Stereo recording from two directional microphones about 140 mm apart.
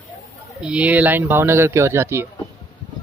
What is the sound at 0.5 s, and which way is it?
Speech, 10° right (ahead or behind).